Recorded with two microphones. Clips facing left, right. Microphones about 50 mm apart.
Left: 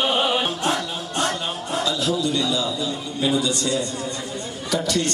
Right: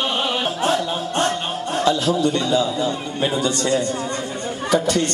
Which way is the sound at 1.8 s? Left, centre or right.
Right.